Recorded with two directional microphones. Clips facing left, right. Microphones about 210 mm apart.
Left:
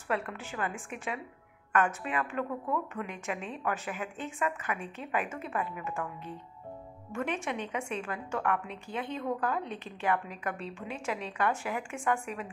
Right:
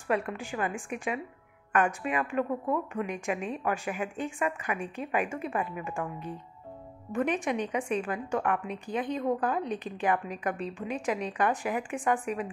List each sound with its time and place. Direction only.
0.1 s a woman's voice: 15° right (ahead or behind)